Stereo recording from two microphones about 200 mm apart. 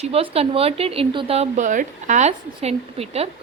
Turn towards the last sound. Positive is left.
turn(degrees=-30)  # may be behind; listen again after turning